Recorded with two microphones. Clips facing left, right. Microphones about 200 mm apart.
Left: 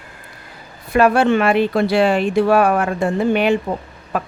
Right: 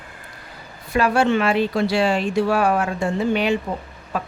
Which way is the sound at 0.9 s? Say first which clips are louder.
Left 4 dB; 55° left (ahead or behind).